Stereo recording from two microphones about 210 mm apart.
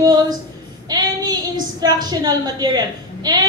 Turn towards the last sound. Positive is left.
turn(degrees=-20)  # may be behind; listen again after turning